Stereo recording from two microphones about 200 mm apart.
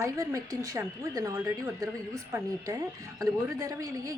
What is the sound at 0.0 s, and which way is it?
A woman's voice, 15° right (ahead or behind).